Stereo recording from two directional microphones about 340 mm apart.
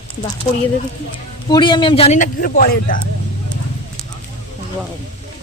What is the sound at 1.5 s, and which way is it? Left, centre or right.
A man's voice, centre.